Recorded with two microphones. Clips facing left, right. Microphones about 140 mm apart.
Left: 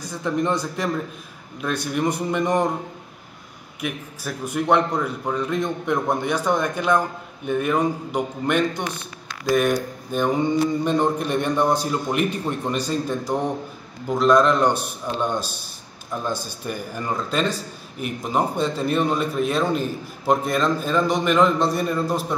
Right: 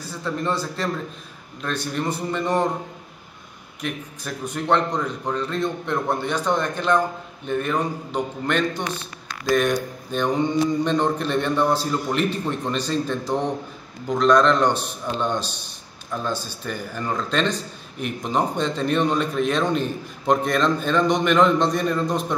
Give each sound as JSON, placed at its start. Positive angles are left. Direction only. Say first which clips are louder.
{"t": 0.1, "sound": "a man's voice", "louder": "left 3 dB", "side_deg": 15}
{"t": 3.8, "sound": "a man's voice", "louder": "left 1 dB", "side_deg": 10}